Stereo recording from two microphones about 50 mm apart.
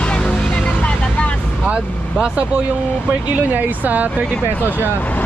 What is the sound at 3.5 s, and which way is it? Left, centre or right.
Speech, right.